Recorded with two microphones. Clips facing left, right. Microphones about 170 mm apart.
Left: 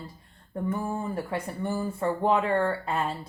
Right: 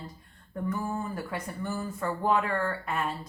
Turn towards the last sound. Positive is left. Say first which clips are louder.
# left 3 dB
turn(degrees=30)  # may be behind; listen again after turning